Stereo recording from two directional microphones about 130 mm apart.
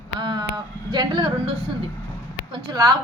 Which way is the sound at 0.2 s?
35° right (ahead or behind).